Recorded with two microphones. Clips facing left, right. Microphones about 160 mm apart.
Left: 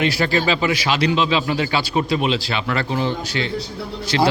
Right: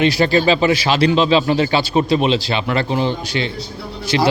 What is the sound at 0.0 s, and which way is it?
Speech, 20° right (ahead or behind).